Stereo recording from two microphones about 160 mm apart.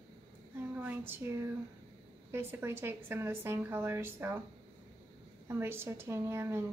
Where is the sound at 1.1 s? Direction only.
15° right (ahead or behind).